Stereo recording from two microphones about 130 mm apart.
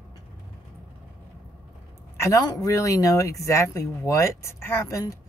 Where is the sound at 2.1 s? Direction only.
25° left (ahead or behind).